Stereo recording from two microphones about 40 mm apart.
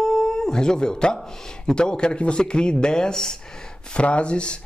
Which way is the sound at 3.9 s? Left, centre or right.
Left.